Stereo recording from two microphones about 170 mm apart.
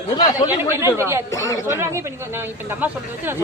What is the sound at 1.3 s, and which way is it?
Speech, 15° left (ahead or behind).